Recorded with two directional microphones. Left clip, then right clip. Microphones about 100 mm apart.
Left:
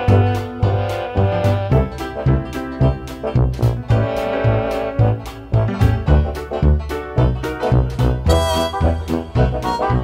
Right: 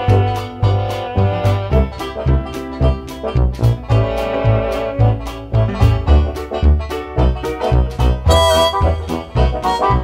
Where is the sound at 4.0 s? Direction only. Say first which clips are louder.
Right 1 dB; 15° left (ahead or behind).